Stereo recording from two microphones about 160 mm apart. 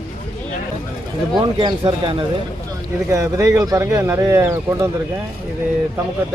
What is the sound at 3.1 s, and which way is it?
Speech, 20° right (ahead or behind).